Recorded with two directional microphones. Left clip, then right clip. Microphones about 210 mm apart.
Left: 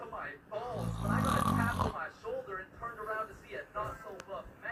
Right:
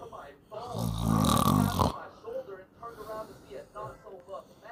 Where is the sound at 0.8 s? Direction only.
55° right (ahead or behind).